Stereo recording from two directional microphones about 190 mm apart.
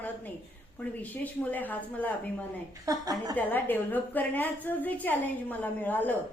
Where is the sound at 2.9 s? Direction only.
20° right (ahead or behind).